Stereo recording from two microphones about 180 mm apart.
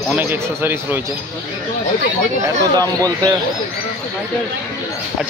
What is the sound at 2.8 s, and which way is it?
Speech, 20° right (ahead or behind).